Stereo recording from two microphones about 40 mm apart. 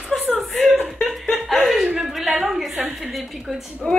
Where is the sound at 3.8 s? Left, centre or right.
Centre.